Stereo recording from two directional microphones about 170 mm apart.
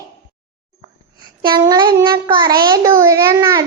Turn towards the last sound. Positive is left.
turn(degrees=-20)  # may be behind; listen again after turning